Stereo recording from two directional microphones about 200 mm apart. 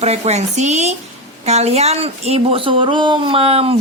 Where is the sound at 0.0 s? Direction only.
35° right (ahead or behind).